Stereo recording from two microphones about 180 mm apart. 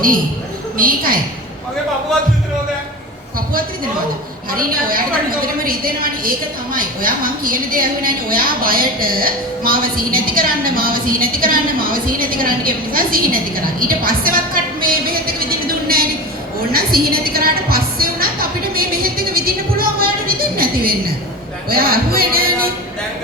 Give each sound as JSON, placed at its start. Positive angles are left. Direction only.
{"t": 0.8, "sound": "a woman's voice", "side_deg": -50}
{"t": 4.5, "sound": "a woman's voice", "side_deg": -55}
{"t": 16.7, "sound": "music", "side_deg": -55}